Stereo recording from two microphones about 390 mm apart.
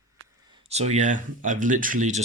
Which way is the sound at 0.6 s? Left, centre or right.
Centre.